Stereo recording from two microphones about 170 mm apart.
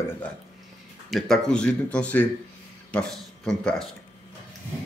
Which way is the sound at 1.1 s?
5° left (ahead or behind).